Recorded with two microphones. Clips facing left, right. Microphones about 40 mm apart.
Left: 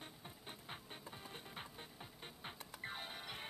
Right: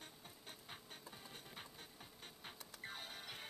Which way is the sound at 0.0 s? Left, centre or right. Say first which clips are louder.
Left 3 dB; left.